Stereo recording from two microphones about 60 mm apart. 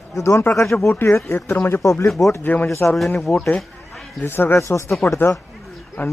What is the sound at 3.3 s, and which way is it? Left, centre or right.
Speech, left.